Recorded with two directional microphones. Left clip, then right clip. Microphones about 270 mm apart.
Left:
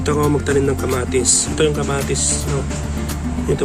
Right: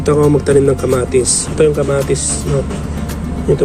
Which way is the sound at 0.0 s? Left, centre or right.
Centre.